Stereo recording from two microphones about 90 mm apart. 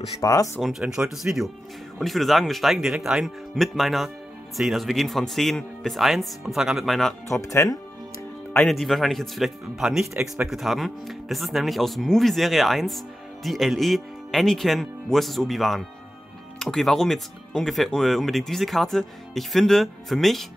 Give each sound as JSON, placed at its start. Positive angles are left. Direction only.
{"t": 0.2, "sound": "speech", "side_deg": 40}
{"t": 0.6, "sound": "speech", "side_deg": 0}
{"t": 7.2, "sound": "speech", "side_deg": 35}
{"t": 8.6, "sound": "speech", "side_deg": 0}